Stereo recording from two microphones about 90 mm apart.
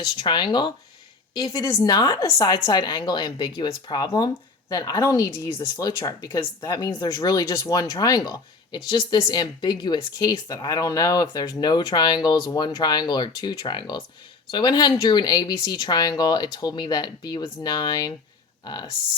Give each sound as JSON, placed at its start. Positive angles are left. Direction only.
{"t": 0.0, "sound": "speech", "side_deg": 55}